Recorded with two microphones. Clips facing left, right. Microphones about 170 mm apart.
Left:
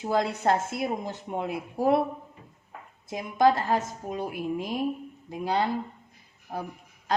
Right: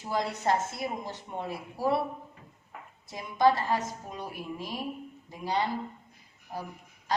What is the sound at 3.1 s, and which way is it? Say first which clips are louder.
A woman's voice: left 2 dB; 50° left (ahead or behind).